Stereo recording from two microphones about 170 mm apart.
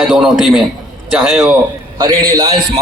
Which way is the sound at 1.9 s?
25° right (ahead or behind).